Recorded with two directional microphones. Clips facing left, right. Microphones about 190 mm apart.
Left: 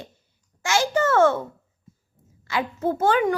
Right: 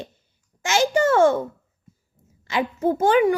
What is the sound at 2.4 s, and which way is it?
Speech, 20° right (ahead or behind).